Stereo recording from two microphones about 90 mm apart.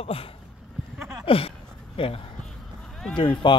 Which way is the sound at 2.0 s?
75° left (ahead or behind).